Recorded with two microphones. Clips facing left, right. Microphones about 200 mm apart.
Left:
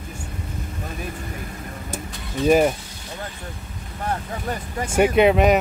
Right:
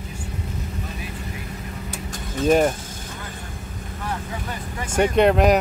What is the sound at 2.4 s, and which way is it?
Speech, centre (ahead or behind).